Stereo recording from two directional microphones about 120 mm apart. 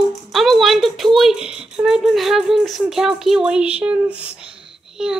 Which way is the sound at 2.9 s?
5° right (ahead or behind).